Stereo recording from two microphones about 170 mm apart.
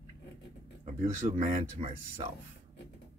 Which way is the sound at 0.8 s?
45° right (ahead or behind).